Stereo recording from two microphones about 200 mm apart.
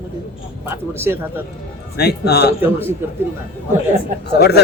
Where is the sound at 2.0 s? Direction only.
55° left (ahead or behind).